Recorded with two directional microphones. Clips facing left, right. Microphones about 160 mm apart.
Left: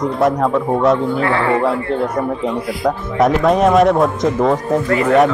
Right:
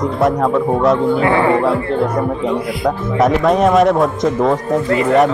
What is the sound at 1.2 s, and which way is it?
Speech, 15° right (ahead or behind).